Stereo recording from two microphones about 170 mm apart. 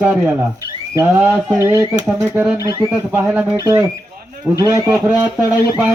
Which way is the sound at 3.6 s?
20° right (ahead or behind).